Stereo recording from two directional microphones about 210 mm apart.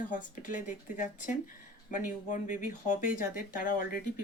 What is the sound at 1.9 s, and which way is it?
Speech, 35° left (ahead or behind).